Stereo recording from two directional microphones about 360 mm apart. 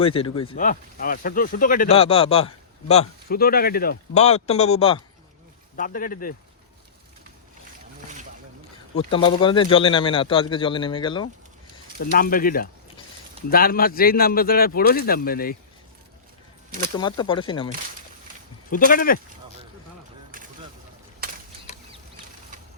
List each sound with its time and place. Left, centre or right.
0.0 s speech: centre
9.0 s speech: centre
11.9 s speech: left
17.0 s speech: centre
18.7 s speech: left
20.3 s a sound: right